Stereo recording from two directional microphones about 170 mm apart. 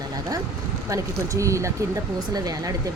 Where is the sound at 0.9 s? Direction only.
20° right (ahead or behind).